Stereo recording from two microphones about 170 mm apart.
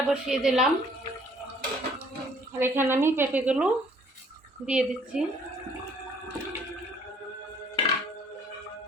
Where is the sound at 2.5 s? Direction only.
15° right (ahead or behind).